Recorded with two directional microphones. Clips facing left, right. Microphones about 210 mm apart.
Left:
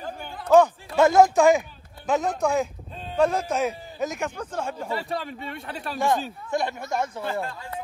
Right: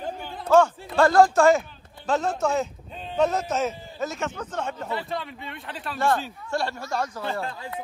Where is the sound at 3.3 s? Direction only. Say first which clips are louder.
Left 1 dB; 10° left (ahead or behind).